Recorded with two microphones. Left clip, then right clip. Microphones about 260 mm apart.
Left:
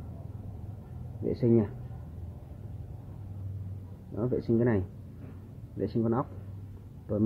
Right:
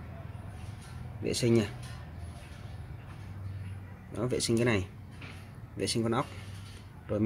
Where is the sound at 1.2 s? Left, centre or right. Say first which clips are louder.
Left 1 dB; centre.